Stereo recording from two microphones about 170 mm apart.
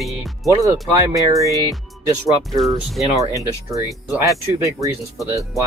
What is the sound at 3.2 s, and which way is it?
Speech, 20° right (ahead or behind).